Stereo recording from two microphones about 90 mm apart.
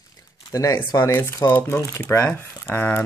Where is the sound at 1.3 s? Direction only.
25° left (ahead or behind).